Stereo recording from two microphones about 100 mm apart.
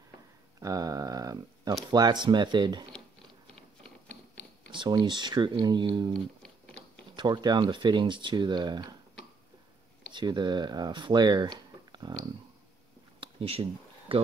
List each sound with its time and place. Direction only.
0.6 s a sound: 35° right (ahead or behind)
1.9 s speech: 45° right (ahead or behind)
4.6 s speech: 45° right (ahead or behind)
7.2 s speech: 45° right (ahead or behind)
10.1 s speech: 45° right (ahead or behind)
13.2 s a sound: 70° right (ahead or behind)